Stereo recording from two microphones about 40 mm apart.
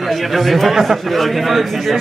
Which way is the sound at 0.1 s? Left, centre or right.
Centre.